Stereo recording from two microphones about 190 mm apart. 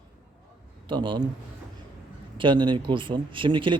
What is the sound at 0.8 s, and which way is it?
Speech, 25° right (ahead or behind).